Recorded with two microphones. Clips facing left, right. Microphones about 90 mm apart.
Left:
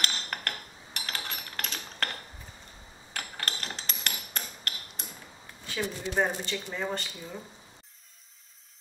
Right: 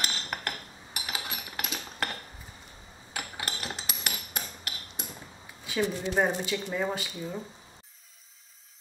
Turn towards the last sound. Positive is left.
turn(degrees=-5)  # may be behind; listen again after turning